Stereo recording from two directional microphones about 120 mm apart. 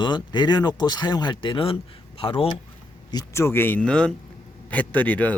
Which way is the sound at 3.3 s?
20° left (ahead or behind).